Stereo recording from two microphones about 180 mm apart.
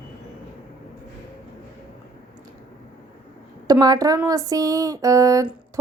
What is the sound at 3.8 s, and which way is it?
A woman's voice, 20° right (ahead or behind).